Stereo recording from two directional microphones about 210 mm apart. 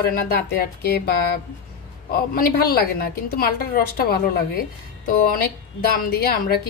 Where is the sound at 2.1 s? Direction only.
45° left (ahead or behind).